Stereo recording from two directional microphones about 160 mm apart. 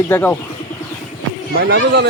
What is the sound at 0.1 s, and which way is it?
Speech, 10° left (ahead or behind).